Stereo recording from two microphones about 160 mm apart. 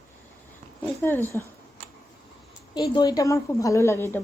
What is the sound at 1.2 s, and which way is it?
Speech, 20° right (ahead or behind).